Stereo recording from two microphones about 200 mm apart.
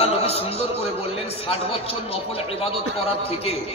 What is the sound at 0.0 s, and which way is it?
A man's voice, 30° left (ahead or behind).